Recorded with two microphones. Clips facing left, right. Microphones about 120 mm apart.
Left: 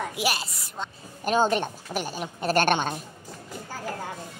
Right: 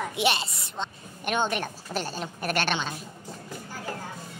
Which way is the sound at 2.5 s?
45° left (ahead or behind).